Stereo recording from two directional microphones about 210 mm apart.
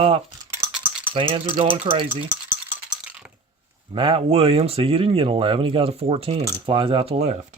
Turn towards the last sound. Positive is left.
turn(degrees=-30)  # may be behind; listen again after turning